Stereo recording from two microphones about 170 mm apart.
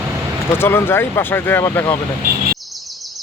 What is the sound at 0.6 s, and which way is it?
Speech, 15° left (ahead or behind).